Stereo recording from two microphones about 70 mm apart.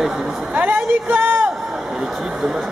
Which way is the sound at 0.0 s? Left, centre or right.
Centre.